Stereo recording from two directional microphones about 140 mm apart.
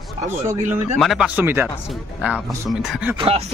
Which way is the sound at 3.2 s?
45° right (ahead or behind).